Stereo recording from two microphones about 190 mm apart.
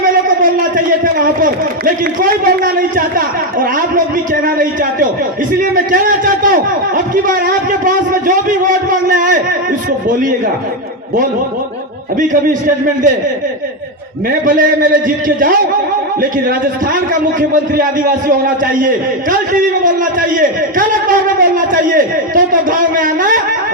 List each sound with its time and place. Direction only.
0.4 s a man's voice: 45° right (ahead or behind)
12.3 s a man's voice: 45° right (ahead or behind)
14.4 s a man's voice: 45° right (ahead or behind)
17.5 s a man's voice: 45° right (ahead or behind)